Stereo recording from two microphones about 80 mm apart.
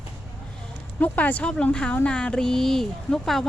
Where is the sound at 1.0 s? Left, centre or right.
Left.